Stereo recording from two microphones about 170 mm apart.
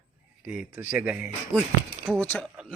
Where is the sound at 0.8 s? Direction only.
10° right (ahead or behind).